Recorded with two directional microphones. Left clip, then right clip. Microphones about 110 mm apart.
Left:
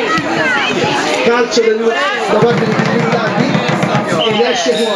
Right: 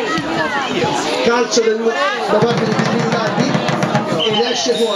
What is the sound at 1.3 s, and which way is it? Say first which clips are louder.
Speech: left 2 dB; 15° right (ahead or behind).